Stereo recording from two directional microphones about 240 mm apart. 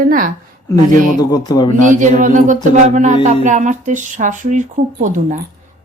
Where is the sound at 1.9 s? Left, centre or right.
Right.